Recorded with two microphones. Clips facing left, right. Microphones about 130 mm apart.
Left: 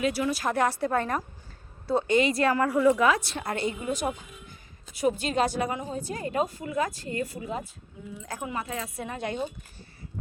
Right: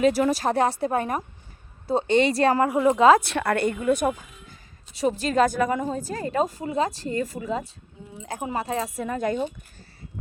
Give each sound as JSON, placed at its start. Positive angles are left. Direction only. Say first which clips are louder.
{"t": 0.0, "sound": "a woman's voice", "louder": "right 7 dB", "side_deg": -40}
{"t": 0.4, "sound": "a woman's voice", "louder": "right 3 dB", "side_deg": -25}
{"t": 3.2, "sound": "a woman's voice", "louder": "right 7 dB", "side_deg": -65}
{"t": 4.9, "sound": "a woman's voice", "louder": "right 4 dB", "side_deg": -35}